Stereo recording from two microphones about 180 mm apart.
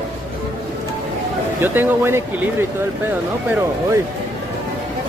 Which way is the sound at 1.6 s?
10° right (ahead or behind).